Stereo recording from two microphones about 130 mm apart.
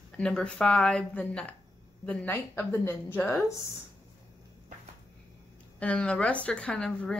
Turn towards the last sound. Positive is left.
turn(degrees=5)  # may be behind; listen again after turning